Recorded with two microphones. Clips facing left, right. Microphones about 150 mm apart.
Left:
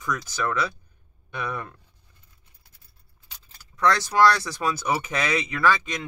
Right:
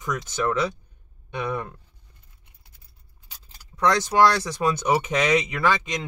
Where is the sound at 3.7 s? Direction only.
20° right (ahead or behind).